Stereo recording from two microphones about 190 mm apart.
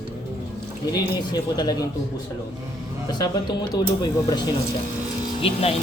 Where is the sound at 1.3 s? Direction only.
20° left (ahead or behind).